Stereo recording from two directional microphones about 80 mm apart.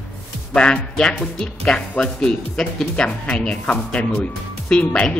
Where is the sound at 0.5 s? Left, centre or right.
Centre.